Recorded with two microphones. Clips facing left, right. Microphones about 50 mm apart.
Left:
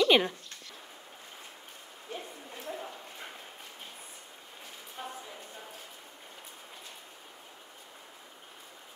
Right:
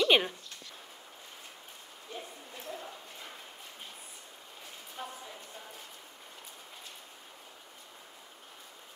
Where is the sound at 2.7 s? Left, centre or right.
Left.